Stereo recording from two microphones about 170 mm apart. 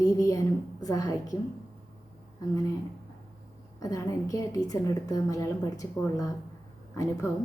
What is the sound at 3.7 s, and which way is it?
A woman's voice, 20° left (ahead or behind).